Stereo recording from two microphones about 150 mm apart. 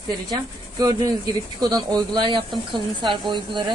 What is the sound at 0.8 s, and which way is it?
A woman's voice, 25° right (ahead or behind).